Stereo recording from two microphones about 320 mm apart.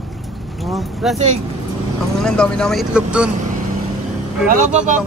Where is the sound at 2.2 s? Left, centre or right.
Centre.